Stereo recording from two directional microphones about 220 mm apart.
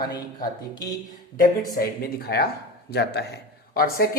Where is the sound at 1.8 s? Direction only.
45° left (ahead or behind).